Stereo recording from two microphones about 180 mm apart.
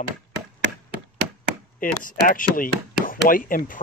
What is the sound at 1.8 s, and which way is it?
Speech, 50° left (ahead or behind).